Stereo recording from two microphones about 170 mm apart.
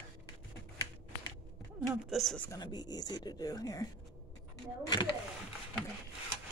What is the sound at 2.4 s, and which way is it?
Speech, 25° left (ahead or behind).